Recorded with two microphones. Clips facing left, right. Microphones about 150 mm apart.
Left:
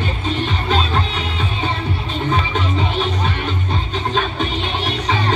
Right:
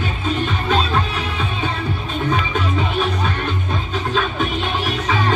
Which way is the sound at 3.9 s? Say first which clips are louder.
Even; 45° right (ahead or behind).